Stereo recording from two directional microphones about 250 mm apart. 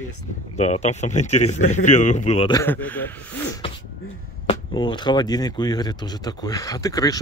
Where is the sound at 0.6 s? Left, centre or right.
Left; by 3.1 s centre.